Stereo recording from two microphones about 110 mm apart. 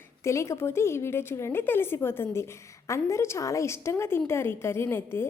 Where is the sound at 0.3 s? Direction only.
25° left (ahead or behind).